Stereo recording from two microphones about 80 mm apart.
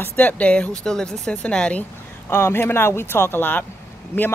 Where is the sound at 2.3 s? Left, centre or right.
Left.